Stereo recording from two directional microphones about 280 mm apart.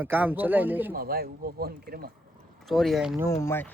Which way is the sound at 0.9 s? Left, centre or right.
Right.